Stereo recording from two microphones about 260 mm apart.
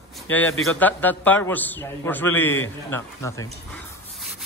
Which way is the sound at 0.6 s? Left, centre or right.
Centre.